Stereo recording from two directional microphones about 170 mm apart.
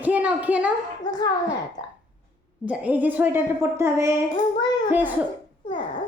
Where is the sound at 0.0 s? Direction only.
10° right (ahead or behind).